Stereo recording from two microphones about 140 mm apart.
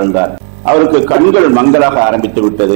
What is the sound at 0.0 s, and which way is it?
A man's voice, 20° right (ahead or behind).